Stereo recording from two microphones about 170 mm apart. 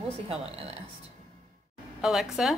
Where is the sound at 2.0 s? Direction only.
Centre (ahead or behind).